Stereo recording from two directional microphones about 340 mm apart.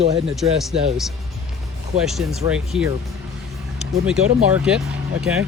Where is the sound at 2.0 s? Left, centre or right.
Centre.